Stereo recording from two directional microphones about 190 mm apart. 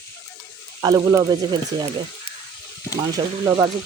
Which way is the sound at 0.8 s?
20° right (ahead or behind).